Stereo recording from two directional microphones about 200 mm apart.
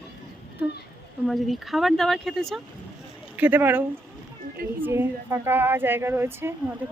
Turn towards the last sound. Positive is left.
turn(degrees=-10)  # may be behind; listen again after turning